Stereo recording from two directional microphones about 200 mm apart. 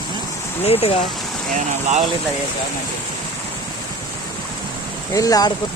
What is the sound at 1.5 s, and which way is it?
Speech, 35° right (ahead or behind).